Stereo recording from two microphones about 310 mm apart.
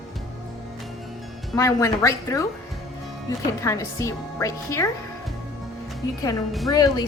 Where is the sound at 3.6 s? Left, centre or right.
Centre.